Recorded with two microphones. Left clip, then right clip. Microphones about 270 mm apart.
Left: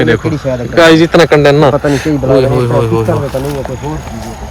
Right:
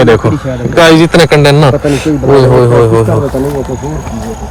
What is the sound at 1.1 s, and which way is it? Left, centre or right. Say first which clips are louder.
Speech: even; right.